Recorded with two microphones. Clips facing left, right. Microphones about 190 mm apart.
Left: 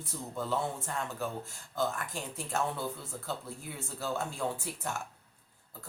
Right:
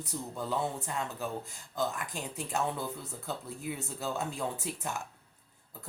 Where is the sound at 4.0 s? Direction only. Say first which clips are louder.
Left 2 dB; 20° right (ahead or behind).